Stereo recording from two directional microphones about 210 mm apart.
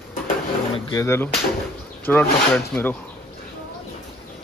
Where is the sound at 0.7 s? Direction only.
25° left (ahead or behind).